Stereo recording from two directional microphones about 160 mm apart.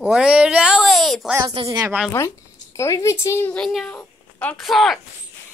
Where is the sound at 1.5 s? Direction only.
35° right (ahead or behind).